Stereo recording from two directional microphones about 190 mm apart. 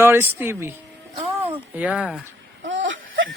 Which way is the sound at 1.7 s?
5° right (ahead or behind).